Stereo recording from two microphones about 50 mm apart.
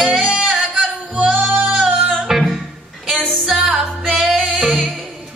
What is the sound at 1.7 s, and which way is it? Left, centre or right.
Music, centre.